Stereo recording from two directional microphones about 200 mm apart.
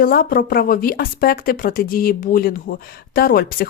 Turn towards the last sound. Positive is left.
turn(degrees=50)  # may be behind; listen again after turning